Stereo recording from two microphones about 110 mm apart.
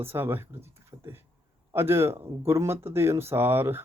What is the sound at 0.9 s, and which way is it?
Beatboxing, 20° right (ahead or behind).